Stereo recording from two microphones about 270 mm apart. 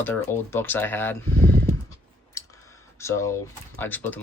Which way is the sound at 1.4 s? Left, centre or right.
Right.